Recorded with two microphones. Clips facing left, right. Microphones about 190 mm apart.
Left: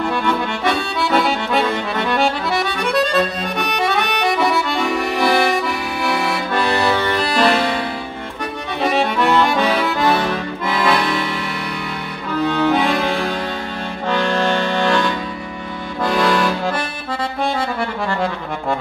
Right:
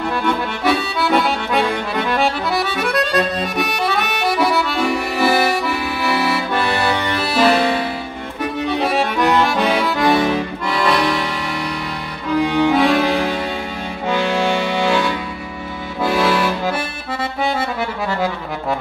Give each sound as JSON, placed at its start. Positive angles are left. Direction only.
{"t": 0.2, "sound": "accordion", "side_deg": 0}
{"t": 6.9, "sound": "music", "side_deg": -10}
{"t": 8.8, "sound": "accordion", "side_deg": 0}
{"t": 9.7, "sound": "accordion", "side_deg": -15}
{"t": 10.7, "sound": "accordion", "side_deg": 0}
{"t": 12.4, "sound": "music", "side_deg": -15}
{"t": 12.8, "sound": "music", "side_deg": -5}
{"t": 14.0, "sound": "accordion", "side_deg": -5}